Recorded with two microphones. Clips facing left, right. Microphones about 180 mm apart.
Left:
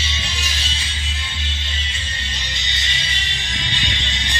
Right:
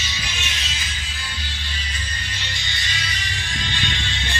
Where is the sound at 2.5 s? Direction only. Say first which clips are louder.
Even; 20° left (ahead or behind).